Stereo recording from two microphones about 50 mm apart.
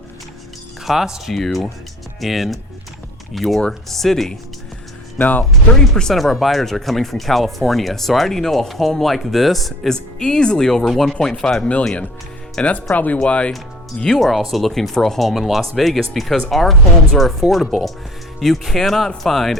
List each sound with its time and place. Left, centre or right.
0.9 s speech: centre
1.3 s speech: centre
5.1 s speech: left
5.9 s speech: centre
9.9 s speech: centre
11.1 s speech: centre
12.6 s speech: left
14.2 s speech: centre